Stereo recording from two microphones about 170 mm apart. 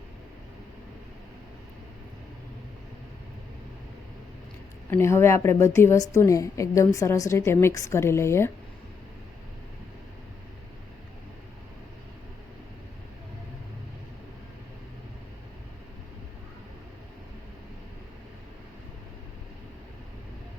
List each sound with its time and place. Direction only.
4.9 s a woman's voice: 15° left (ahead or behind)